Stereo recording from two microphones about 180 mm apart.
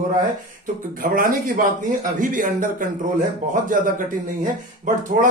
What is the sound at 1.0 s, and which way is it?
Speech, 50° right (ahead or behind).